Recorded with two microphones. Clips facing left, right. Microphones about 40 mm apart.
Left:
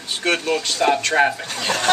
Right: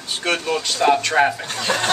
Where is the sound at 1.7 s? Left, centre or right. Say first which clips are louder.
Right 2 dB; right.